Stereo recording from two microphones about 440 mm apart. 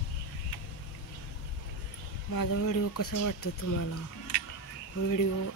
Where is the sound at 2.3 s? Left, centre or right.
Left.